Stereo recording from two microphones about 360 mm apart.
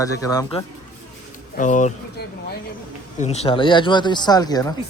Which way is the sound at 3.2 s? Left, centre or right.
Centre.